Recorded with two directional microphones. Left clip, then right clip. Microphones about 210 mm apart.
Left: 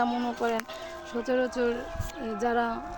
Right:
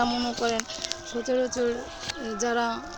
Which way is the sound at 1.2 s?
Centre (ahead or behind).